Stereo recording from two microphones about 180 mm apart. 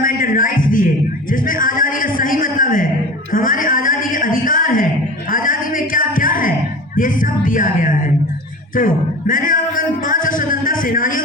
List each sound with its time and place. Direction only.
0.0 s music: 50° left (ahead or behind)
1.3 s a sound: 50° left (ahead or behind)
8.7 s music: 50° left (ahead or behind)